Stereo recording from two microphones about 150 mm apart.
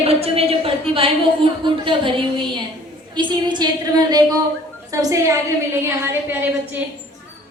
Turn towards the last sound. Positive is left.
turn(degrees=-15)  # may be behind; listen again after turning